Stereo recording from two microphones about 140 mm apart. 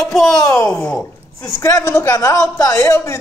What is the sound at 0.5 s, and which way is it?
A child's voice, 20° left (ahead or behind).